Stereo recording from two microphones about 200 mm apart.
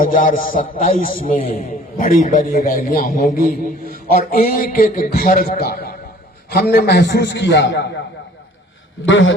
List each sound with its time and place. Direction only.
0.0 s a man's voice: 45° left (ahead or behind); by 7.9 s 60° left (ahead or behind)
9.0 s a man's voice: 70° left (ahead or behind)